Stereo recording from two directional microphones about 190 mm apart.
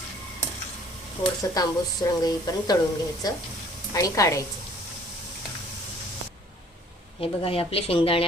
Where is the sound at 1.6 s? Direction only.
20° left (ahead or behind).